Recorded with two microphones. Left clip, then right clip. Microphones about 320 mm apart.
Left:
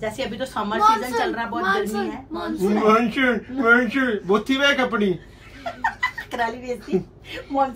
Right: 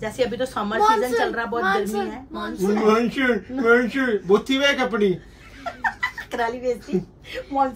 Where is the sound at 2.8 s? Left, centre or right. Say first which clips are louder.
Left 2 dB; centre.